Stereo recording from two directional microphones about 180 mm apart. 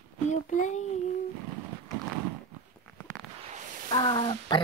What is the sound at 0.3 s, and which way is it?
Speech, 45° left (ahead or behind).